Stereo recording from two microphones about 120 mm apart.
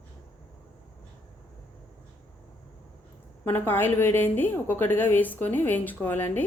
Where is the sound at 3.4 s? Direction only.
20° left (ahead or behind).